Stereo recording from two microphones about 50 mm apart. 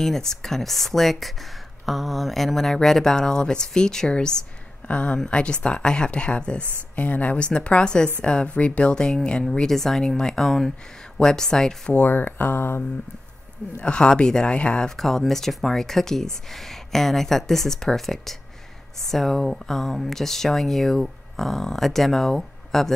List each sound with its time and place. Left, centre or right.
0.0 s speech: centre
11.9 s speech: left
13.7 s speech: centre
14.9 s speech: centre